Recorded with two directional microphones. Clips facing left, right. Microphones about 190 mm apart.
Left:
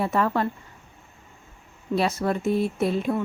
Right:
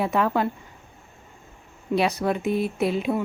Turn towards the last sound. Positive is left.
turn(degrees=0)  # may be behind; listen again after turning